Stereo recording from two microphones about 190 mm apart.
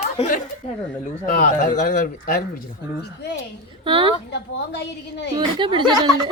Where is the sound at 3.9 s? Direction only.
25° right (ahead or behind).